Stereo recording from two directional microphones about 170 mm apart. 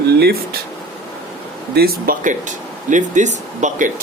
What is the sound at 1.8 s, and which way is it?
Speech, 60° right (ahead or behind).